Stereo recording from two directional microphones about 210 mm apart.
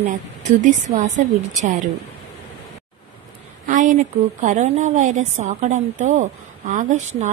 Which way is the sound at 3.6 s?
35° right (ahead or behind).